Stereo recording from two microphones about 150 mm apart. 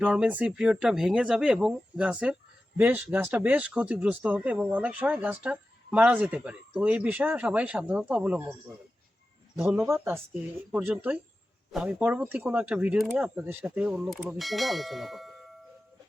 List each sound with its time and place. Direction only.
0.0 s speech: 10° right (ahead or behind)
9.7 s speech: 15° right (ahead or behind)
14.1 s bell: centre (ahead or behind)